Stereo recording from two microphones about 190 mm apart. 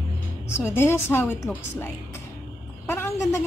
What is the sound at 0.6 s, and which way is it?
Speech, 15° left (ahead or behind).